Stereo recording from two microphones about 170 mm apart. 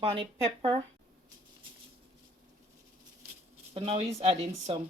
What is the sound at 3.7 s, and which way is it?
Speech, 35° right (ahead or behind).